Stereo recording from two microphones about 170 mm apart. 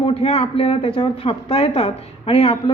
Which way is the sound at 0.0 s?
35° left (ahead or behind).